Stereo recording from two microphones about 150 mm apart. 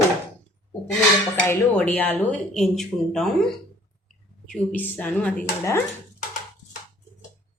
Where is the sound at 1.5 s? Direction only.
10° left (ahead or behind).